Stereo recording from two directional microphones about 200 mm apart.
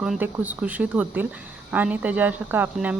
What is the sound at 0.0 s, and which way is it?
Speech, 5° right (ahead or behind).